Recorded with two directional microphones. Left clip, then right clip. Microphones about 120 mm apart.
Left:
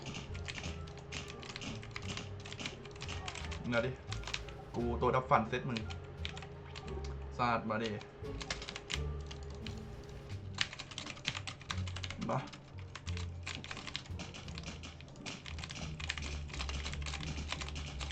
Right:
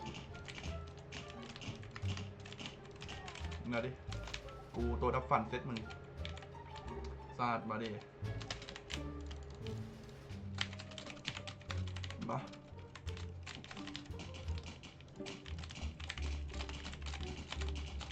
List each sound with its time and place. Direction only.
0.5 s music: centre (ahead or behind)
2.0 s typing: centre (ahead or behind)
3.2 s music: 15° left (ahead or behind)
4.8 s speech: centre (ahead or behind)
7.0 s a sound: centre (ahead or behind)
7.9 s music: 20° left (ahead or behind)
8.4 s typing: 10° left (ahead or behind)
10.6 s typing: 15° left (ahead or behind)
13.1 s typing: 15° left (ahead or behind)
16.0 s typing: 15° left (ahead or behind)
17.5 s music: 15° left (ahead or behind)